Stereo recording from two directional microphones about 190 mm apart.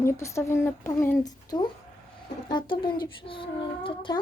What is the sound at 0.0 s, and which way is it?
A child's voice, 15° left (ahead or behind).